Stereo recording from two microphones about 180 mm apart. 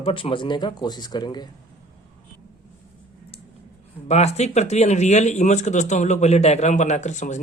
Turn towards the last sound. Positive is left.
turn(degrees=40)  # may be behind; listen again after turning